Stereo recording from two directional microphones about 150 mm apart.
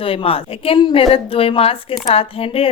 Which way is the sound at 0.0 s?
40° left (ahead or behind).